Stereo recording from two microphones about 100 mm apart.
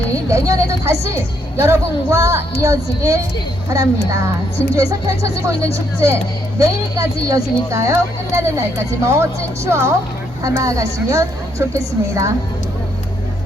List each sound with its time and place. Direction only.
0.3 s speech: 30° right (ahead or behind)
4.7 s speech: 35° right (ahead or behind)